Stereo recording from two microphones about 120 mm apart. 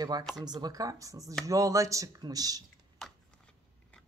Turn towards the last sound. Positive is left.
turn(degrees=5)  # may be behind; listen again after turning